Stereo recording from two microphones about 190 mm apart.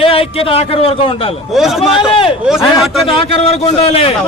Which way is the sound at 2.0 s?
30° left (ahead or behind).